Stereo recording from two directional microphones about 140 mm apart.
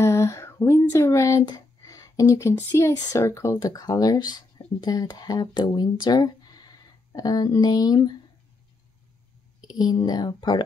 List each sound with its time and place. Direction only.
0.0 s speech: 20° left (ahead or behind)
9.7 s speech: 30° left (ahead or behind)